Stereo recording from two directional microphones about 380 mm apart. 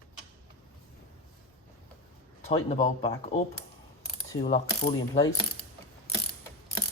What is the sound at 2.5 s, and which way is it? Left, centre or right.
Speech, centre.